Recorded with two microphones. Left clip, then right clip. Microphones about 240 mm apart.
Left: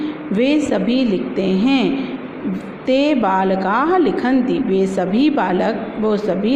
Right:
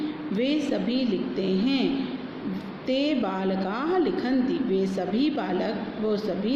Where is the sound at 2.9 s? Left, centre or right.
Left.